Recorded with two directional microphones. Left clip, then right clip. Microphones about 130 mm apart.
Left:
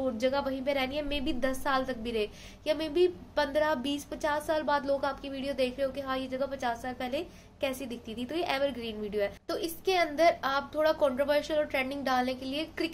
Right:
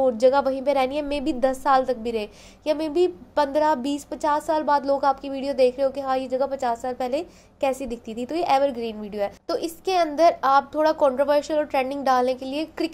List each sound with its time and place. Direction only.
0.0 s a woman's voice: 45° right (ahead or behind)